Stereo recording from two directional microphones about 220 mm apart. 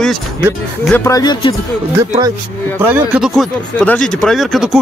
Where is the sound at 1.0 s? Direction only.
15° left (ahead or behind).